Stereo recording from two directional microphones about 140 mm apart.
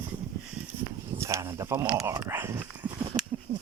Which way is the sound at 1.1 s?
20° right (ahead or behind).